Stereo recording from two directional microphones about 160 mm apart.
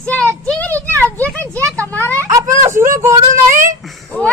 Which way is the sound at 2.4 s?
50° right (ahead or behind).